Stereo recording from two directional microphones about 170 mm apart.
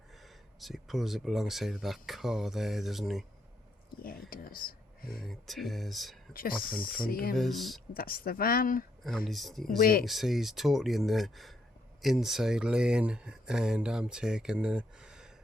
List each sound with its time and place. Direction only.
0.2 s speech: centre (ahead or behind)
4.0 s speech: 60° left (ahead or behind)
5.2 s speech: centre (ahead or behind)
6.3 s speech: 60° left (ahead or behind)
7.3 s speech: centre (ahead or behind)
7.9 s speech: 60° left (ahead or behind)
9.0 s speech: centre (ahead or behind)
9.6 s speech: 60° left (ahead or behind)
10.1 s speech: centre (ahead or behind)